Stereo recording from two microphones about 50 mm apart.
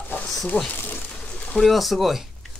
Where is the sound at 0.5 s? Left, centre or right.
Left.